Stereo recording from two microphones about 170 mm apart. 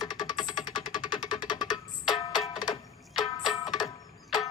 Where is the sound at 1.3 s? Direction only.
25° left (ahead or behind).